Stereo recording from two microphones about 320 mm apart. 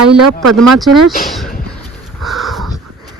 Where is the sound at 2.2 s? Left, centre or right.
Centre.